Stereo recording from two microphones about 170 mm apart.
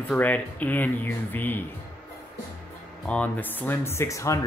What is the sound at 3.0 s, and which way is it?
Speech, 10° left (ahead or behind).